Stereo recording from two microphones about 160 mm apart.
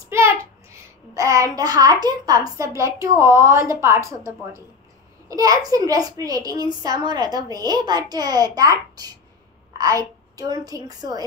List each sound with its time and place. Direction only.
0.1 s a child's voice: 15° right (ahead or behind)